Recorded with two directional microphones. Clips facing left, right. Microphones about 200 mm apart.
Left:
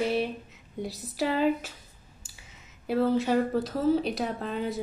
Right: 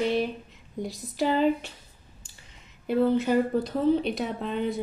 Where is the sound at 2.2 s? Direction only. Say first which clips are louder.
Even; 5° left (ahead or behind).